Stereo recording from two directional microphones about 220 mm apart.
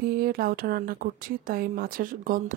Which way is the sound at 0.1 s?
40° right (ahead or behind).